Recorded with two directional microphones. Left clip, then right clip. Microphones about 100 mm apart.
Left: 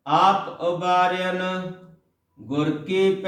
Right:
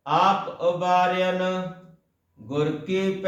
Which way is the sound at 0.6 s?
20° right (ahead or behind).